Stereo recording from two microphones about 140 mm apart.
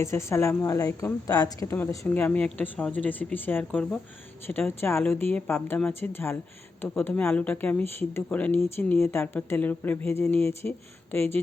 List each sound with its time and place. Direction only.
0.0 s a woman's voice: 20° left (ahead or behind)
1.7 s speech: 15° left (ahead or behind)